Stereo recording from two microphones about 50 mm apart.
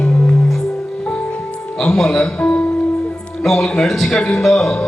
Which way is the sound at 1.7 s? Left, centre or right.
Centre.